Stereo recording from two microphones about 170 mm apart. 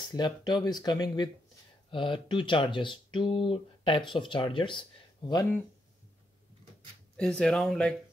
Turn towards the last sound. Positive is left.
turn(degrees=5)  # may be behind; listen again after turning